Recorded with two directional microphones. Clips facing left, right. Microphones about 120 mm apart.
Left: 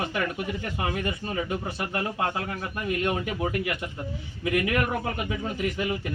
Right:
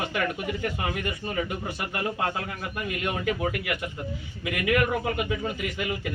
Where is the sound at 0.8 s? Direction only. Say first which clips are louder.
Left 1 dB; 30° left (ahead or behind).